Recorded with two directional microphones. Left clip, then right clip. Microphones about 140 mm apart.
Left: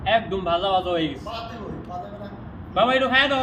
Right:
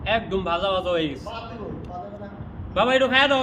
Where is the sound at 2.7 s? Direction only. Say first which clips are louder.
Even; 25° right (ahead or behind).